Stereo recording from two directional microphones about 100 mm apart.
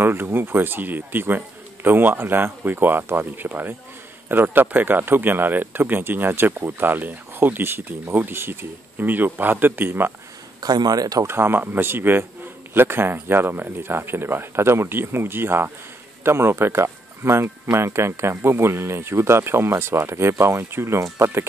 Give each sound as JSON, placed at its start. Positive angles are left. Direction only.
{"t": 0.0, "sound": "speech", "side_deg": -20}
{"t": 10.6, "sound": "a man's voice", "side_deg": -40}
{"t": 11.2, "sound": "speech", "side_deg": -25}